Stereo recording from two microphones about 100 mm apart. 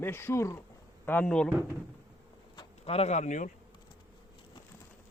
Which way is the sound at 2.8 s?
90° left.